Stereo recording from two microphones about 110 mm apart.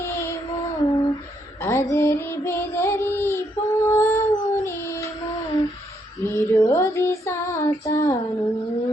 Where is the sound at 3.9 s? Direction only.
25° left (ahead or behind).